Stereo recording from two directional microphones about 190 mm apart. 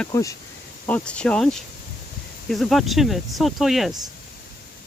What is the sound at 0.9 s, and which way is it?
Speech, 5° left (ahead or behind).